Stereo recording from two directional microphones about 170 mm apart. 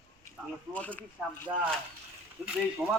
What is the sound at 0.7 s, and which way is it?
Speech, 10° left (ahead or behind).